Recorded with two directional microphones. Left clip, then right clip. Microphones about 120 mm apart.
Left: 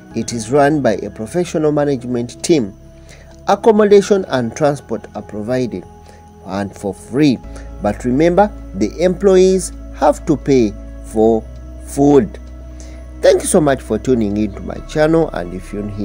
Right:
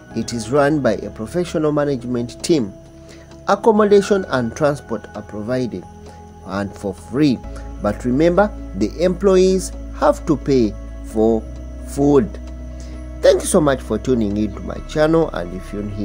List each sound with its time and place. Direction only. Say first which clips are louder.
0.1 s speech: left 3 dB; 35° left (ahead or behind)